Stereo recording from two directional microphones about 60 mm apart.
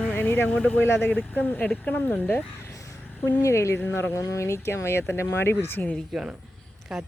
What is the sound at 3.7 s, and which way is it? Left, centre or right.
Speech, left.